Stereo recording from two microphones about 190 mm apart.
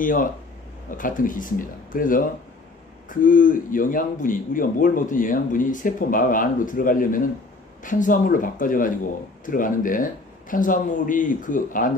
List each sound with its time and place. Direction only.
0.0 s speech: 45° left (ahead or behind)